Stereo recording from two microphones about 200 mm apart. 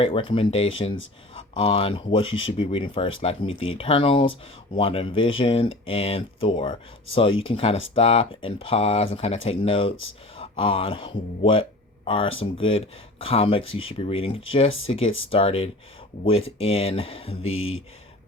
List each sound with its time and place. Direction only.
0.0 s speech: 25° left (ahead or behind)
17.5 s speech: 85° left